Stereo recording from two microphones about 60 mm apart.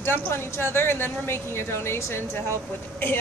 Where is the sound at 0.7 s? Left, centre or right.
Left.